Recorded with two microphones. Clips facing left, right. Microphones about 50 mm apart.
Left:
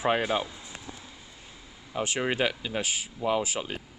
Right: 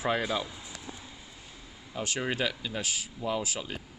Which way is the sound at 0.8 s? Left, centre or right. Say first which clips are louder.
Even; centre.